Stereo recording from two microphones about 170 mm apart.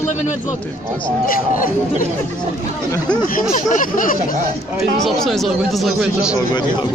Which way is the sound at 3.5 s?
50° left (ahead or behind).